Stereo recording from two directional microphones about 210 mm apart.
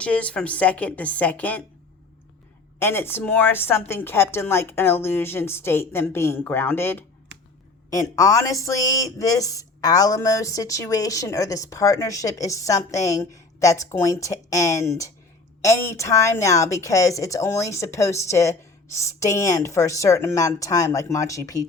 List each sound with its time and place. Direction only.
0.0 s speech: 5° left (ahead or behind)
2.7 s speech: 10° left (ahead or behind)